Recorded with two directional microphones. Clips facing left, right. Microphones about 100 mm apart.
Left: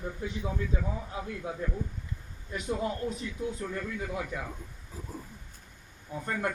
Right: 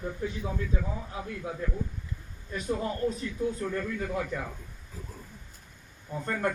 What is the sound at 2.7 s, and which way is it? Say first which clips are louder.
Speech: right 2 dB; 15° left (ahead or behind).